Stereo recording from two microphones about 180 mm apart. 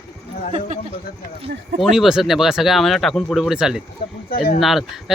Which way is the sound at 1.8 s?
Centre (ahead or behind).